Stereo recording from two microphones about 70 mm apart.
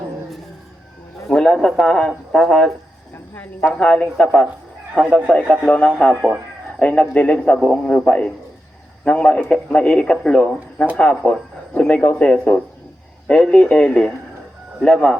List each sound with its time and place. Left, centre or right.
1.3 s speech: centre
3.3 s speech: left
6.7 s speech: centre